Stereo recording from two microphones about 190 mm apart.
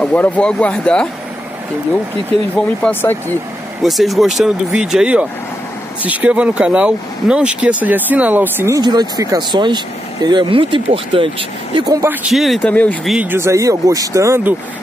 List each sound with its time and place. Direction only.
0.0 s speech: 10° left (ahead or behind)
2.5 s speech: 10° left (ahead or behind)
3.8 s speech: centre (ahead or behind); by 12.0 s 25° right (ahead or behind)
12.0 s speech: 10° right (ahead or behind); by 13.1 s 5° left (ahead or behind)
13.1 s speech: 10° right (ahead or behind)